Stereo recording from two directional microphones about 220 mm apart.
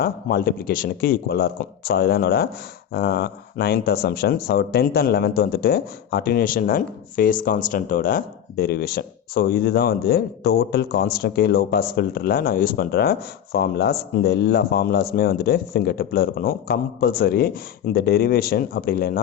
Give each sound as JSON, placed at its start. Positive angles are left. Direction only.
{"t": 0.0, "sound": "speech", "side_deg": 45}